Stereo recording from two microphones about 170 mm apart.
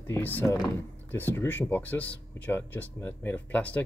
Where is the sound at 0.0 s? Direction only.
10° left (ahead or behind).